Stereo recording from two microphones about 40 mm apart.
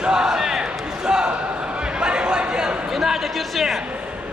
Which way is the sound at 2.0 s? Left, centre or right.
Right.